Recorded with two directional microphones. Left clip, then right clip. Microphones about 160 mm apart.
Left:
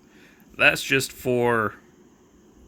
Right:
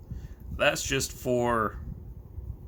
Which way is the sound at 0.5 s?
15° left (ahead or behind).